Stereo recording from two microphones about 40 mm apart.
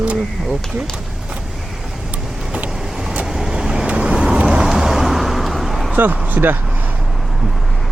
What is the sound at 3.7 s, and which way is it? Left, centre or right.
Vehicle, right.